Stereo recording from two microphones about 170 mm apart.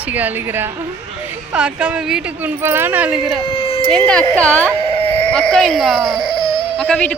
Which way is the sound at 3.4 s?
30° left (ahead or behind).